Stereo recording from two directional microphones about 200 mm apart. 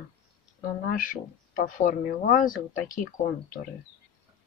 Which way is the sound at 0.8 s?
45° left (ahead or behind).